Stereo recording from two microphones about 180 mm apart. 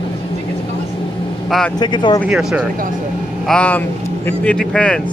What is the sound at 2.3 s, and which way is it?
Speech, 5° right (ahead or behind).